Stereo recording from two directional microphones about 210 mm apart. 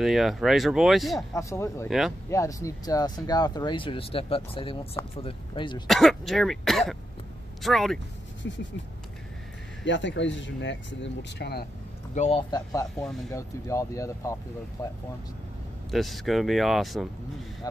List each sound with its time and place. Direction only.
0.0 s speech: centre (ahead or behind)
1.3 s speech: 15° left (ahead or behind)
1.9 s speech: centre (ahead or behind)
2.2 s speech: 15° left (ahead or behind)
5.9 s speech: centre (ahead or behind)
8.4 s speech: 60° left (ahead or behind)
9.8 s speech: 60° left (ahead or behind)
12.2 s speech: 25° left (ahead or behind)
13.0 s speech: centre (ahead or behind)
13.3 s speech: 15° left (ahead or behind)
15.9 s speech: centre (ahead or behind)